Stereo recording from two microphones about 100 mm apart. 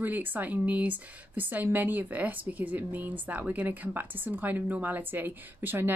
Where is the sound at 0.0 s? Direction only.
20° right (ahead or behind).